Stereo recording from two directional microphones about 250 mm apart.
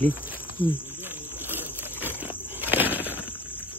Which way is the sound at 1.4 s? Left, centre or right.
Centre.